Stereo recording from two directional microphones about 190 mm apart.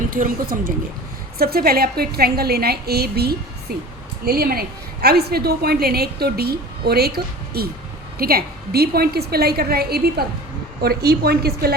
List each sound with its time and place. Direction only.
0.1 s a woman's voice: 45° right (ahead or behind)